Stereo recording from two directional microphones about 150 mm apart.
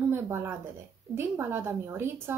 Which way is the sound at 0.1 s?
15° right (ahead or behind).